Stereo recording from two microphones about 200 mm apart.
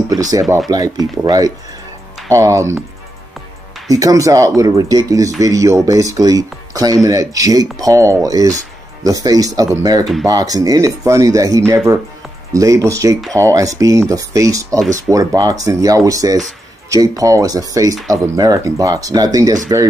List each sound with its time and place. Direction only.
0.1 s speech: 15° right (ahead or behind)
3.9 s speech: 15° right (ahead or behind)